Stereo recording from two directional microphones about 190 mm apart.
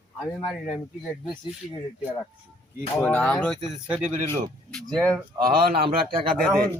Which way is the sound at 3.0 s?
5° left (ahead or behind).